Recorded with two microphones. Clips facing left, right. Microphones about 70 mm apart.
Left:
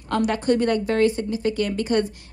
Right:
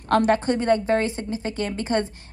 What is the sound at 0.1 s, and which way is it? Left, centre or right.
Speech, right.